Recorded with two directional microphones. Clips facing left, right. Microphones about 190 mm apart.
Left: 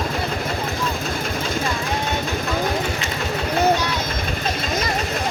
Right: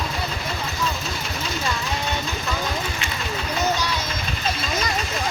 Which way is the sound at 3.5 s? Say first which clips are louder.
Left 6 dB; 55° left (ahead or behind).